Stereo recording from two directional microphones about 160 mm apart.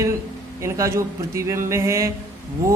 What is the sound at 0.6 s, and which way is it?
Speech, 20° right (ahead or behind).